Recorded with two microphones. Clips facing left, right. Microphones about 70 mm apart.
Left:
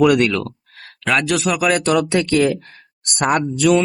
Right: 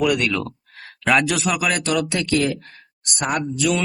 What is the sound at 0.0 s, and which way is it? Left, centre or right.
Speech, left.